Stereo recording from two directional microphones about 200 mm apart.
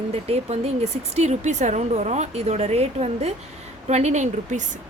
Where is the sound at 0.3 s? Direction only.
30° right (ahead or behind).